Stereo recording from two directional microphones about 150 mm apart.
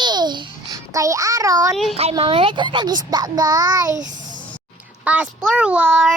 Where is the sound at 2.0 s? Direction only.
40° right (ahead or behind).